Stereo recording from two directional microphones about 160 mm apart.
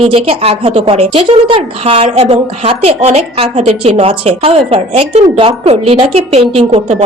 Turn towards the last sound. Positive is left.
turn(degrees=-40)  # may be behind; listen again after turning